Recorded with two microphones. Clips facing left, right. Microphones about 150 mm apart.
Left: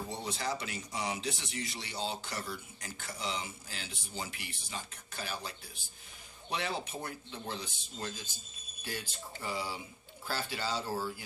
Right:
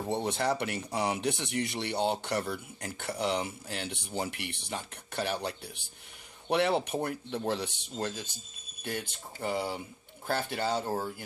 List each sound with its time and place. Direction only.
0.1 s speech: 60° right (ahead or behind)